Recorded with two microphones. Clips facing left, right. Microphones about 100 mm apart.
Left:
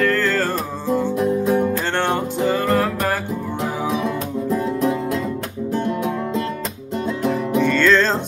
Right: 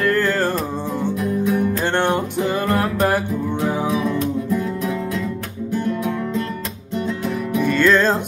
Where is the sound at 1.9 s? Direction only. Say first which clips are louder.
Right 1 dB; 15° right (ahead or behind).